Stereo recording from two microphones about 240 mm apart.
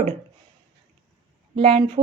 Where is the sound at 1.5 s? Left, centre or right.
Right.